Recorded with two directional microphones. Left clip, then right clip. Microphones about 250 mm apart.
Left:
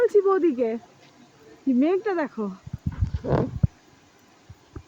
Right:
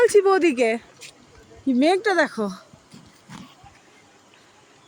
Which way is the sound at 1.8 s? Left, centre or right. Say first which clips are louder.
Right 6 dB; centre.